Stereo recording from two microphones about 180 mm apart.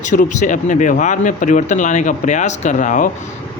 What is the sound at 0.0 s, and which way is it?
Speech, 45° left (ahead or behind).